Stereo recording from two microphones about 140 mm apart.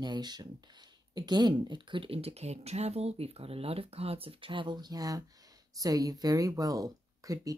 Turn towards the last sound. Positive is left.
turn(degrees=-25)  # may be behind; listen again after turning